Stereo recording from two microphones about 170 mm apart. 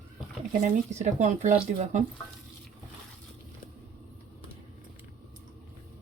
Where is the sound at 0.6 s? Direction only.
45° right (ahead or behind).